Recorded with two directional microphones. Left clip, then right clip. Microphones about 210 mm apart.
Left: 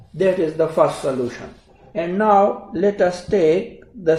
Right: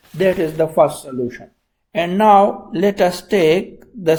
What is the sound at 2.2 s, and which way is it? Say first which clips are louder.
Speech: right 4 dB; 35° right (ahead or behind).